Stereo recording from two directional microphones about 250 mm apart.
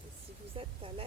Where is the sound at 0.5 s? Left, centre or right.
Right.